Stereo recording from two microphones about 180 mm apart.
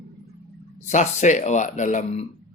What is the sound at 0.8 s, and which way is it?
Speech, 40° left (ahead or behind).